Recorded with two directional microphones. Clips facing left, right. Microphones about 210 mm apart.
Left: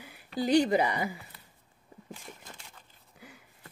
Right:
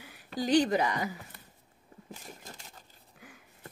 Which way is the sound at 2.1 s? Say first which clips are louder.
Even; 40° right (ahead or behind).